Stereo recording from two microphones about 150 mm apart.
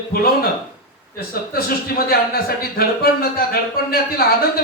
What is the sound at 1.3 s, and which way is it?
Speech, 90° left.